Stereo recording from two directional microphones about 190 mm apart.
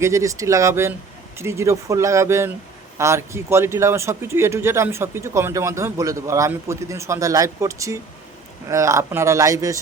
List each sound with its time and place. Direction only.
0.0 s speech: 15° right (ahead or behind)